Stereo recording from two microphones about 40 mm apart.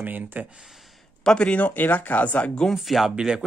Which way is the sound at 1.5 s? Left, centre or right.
Left.